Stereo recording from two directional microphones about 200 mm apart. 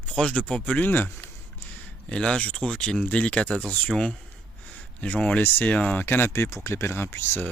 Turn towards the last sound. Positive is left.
turn(degrees=10)  # may be behind; listen again after turning